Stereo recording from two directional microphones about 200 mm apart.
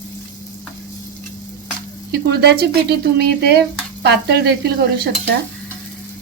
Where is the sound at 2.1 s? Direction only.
55° right (ahead or behind).